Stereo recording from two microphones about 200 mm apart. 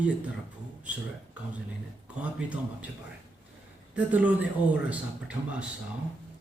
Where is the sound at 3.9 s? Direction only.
5° right (ahead or behind).